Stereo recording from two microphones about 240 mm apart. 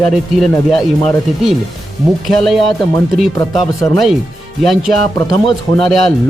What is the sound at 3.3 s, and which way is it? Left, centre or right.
Speech, centre.